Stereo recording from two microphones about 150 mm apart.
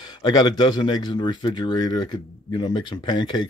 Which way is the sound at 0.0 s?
30° left (ahead or behind).